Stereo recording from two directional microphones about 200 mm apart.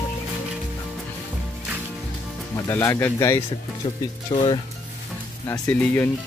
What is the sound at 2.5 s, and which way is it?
Speech, 15° left (ahead or behind).